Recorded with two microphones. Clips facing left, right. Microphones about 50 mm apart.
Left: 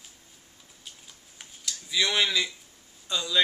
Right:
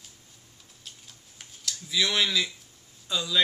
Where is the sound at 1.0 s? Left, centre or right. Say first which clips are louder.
Left 1 dB; centre.